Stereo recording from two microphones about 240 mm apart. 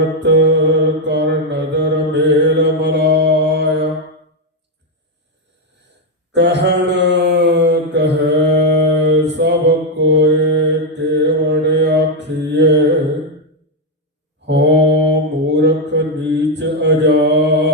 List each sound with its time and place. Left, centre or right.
0.0 s mantra: right
6.3 s mantra: right
14.4 s mantra: right